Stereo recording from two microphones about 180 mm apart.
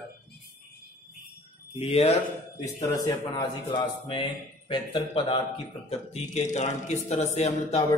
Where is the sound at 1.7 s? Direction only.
35° left (ahead or behind).